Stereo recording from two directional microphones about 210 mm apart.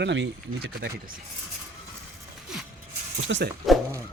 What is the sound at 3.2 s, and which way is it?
Speech, 60° right (ahead or behind).